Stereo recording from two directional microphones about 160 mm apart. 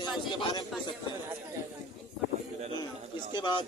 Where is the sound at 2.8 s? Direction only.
30° left (ahead or behind).